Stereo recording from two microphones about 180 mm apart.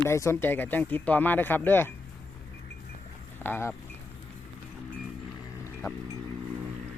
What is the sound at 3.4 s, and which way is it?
Speech, 10° left (ahead or behind).